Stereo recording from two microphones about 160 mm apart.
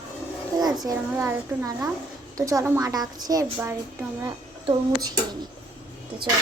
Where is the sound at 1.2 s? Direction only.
10° right (ahead or behind).